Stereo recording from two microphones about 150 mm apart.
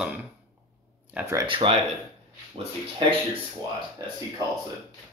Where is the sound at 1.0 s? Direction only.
10° right (ahead or behind).